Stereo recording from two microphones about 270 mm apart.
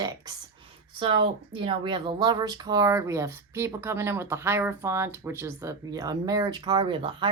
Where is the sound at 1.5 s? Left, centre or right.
Centre.